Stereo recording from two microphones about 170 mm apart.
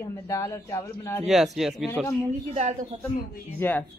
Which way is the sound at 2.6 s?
40° right (ahead or behind).